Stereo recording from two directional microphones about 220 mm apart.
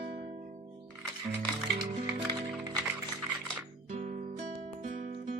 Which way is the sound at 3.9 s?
30° right (ahead or behind).